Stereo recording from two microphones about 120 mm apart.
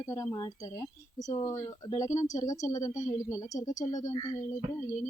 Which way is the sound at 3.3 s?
30° left (ahead or behind).